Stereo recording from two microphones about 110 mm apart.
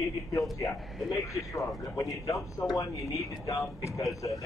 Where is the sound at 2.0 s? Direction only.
30° left (ahead or behind).